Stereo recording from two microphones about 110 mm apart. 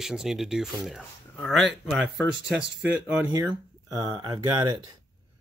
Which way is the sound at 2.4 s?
10° right (ahead or behind).